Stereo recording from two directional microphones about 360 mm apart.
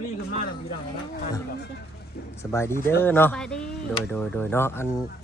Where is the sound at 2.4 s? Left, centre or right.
Centre.